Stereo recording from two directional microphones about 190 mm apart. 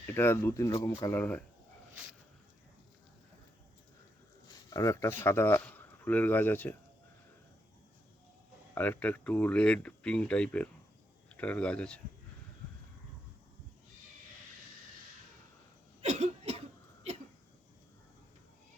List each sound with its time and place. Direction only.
0.1 s speech: 10° left (ahead or behind)
4.4 s speech: 15° left (ahead or behind)
8.7 s speech: 10° left (ahead or behind)
16.0 s cough: 35° right (ahead or behind)